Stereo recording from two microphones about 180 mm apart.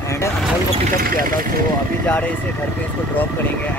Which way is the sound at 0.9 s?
50° right (ahead or behind).